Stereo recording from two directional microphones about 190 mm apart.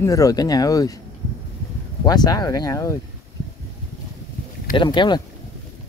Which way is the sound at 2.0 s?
20° left (ahead or behind).